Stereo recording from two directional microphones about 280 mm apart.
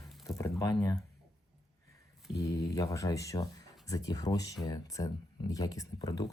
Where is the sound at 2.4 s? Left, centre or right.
Centre.